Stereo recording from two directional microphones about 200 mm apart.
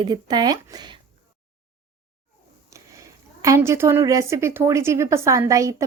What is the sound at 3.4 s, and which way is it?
A woman's voice, 15° right (ahead or behind).